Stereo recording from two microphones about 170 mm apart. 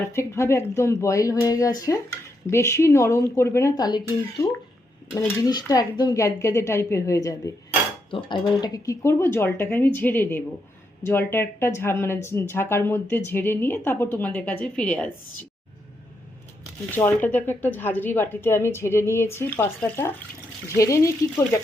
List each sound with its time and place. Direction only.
0.1 s speech: 15° left (ahead or behind)
5.5 s speech: 25° left (ahead or behind)
17.0 s speech: 15° left (ahead or behind)